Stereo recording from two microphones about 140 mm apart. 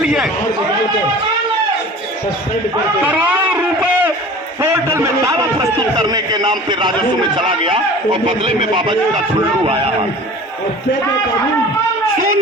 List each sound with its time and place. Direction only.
0.0 s speech: 5° right (ahead or behind)
3.1 s a man's voice: 10° right (ahead or behind); by 10.1 s 45° right (ahead or behind)